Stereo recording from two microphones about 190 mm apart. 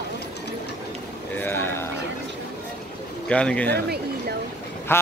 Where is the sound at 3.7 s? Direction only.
55° right (ahead or behind).